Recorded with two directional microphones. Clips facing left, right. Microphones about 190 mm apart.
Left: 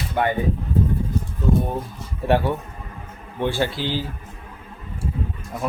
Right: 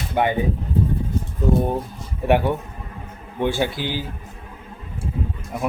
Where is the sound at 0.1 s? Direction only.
15° right (ahead or behind).